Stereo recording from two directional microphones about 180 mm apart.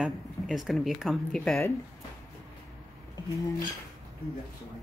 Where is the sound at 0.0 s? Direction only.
Centre (ahead or behind).